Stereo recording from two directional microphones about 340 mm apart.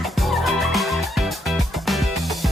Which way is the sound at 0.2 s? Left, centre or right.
Centre.